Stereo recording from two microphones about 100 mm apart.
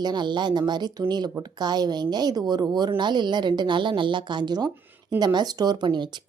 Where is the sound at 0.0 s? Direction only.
45° right (ahead or behind).